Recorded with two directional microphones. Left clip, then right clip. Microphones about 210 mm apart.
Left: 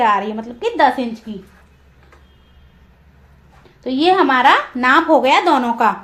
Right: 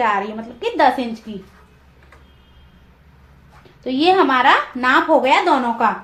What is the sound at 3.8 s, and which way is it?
A woman's voice, 25° left (ahead or behind).